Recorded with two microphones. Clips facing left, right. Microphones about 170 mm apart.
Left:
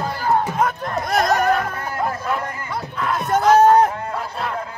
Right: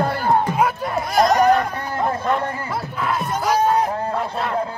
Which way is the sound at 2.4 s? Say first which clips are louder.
Right 4 dB; 30° right (ahead or behind).